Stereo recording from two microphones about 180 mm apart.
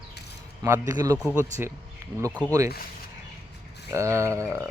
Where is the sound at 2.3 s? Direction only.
10° left (ahead or behind).